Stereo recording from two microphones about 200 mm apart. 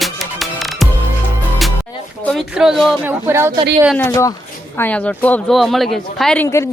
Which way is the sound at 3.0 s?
10° right (ahead or behind).